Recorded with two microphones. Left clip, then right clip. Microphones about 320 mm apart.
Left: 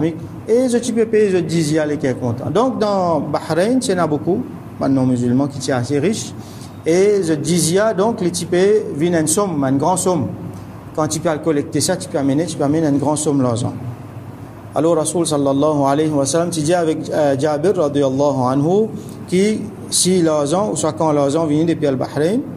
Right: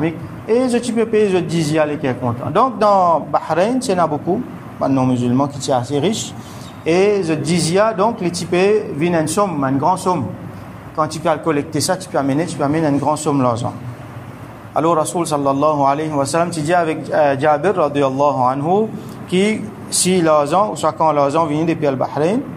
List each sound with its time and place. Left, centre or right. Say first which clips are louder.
0.0 s a man's voice: even; centre
2.9 s a man's voice: right 4 dB; centre
3.4 s a man's voice: even; centre
14.8 s a man's voice: even; centre
18.0 s speech: right 2 dB; centre
19.3 s a man's voice: even; centre